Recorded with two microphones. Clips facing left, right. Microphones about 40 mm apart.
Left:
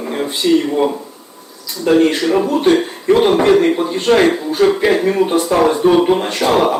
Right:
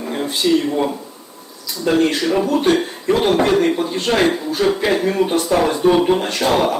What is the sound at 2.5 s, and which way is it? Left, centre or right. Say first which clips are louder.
Speech: left 3 dB; left.